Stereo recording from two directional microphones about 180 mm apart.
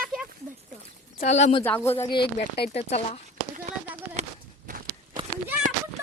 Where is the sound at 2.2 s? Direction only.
65° left (ahead or behind).